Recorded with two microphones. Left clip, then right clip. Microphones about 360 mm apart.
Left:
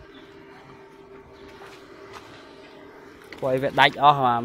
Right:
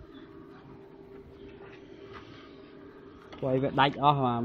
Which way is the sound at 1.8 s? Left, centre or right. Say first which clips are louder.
Left 5 dB; left.